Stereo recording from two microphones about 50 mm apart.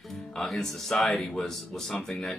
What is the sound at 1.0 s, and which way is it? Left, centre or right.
Speech, centre.